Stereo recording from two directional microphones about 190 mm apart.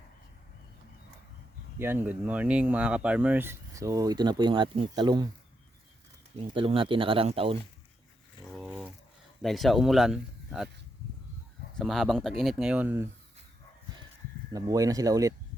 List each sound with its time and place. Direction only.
1.8 s speech: 10° right (ahead or behind)
6.3 s speech: 30° right (ahead or behind)
8.5 s a sound: 5° right (ahead or behind)
9.4 s speech: centre (ahead or behind)
11.8 s speech: centre (ahead or behind)
14.5 s speech: 20° right (ahead or behind)